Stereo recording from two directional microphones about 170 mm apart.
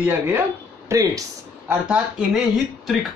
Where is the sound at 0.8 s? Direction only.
15° right (ahead or behind).